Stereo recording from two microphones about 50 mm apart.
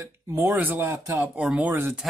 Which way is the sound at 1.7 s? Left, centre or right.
Right.